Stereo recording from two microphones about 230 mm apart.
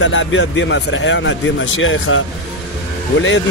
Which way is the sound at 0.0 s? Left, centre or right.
Left.